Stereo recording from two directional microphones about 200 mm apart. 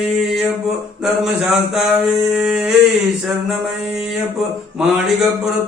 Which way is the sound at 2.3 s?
5° right (ahead or behind).